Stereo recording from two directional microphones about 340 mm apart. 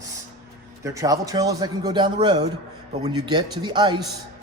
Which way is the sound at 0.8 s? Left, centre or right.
Centre.